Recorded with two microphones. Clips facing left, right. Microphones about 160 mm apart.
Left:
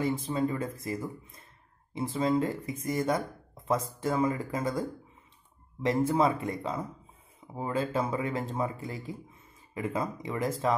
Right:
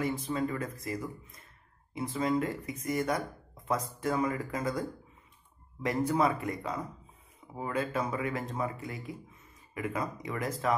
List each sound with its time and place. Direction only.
0.0 s speech: 30° left (ahead or behind)